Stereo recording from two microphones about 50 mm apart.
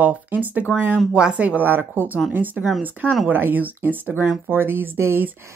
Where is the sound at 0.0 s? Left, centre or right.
Right.